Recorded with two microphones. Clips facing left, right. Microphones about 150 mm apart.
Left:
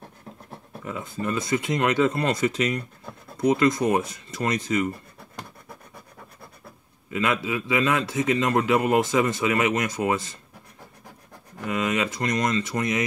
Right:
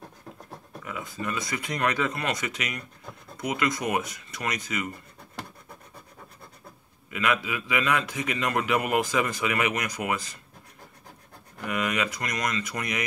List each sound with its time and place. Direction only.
0.8 s a man's voice: 30° left (ahead or behind)
7.1 s a man's voice: 25° left (ahead or behind)
11.5 s a man's voice: 25° left (ahead or behind)